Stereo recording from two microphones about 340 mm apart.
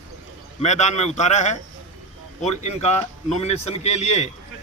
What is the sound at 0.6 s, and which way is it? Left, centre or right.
A man's voice, centre.